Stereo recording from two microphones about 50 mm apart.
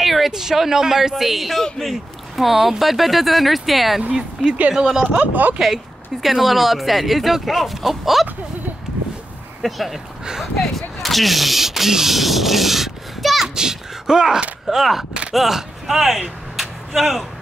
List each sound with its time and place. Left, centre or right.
0.0 s speech: centre
5.0 s speech: right
6.2 s speech: centre
9.6 s speech: centre
10.2 s speech: centre
10.6 s speech: centre
13.6 s a sound: centre
14.7 s speech: centre